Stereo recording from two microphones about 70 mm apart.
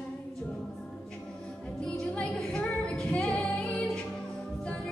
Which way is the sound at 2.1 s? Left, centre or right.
Centre.